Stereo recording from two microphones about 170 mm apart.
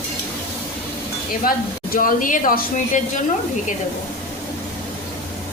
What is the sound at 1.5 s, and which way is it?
A woman's voice, 55° left (ahead or behind).